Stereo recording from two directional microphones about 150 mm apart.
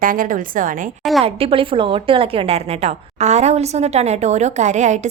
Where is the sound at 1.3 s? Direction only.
40° right (ahead or behind).